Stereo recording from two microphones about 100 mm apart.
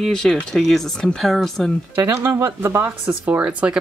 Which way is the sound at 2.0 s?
25° right (ahead or behind).